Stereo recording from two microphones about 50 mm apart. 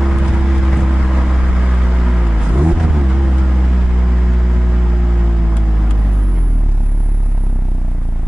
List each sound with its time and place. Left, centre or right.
0.0 s vehicle: centre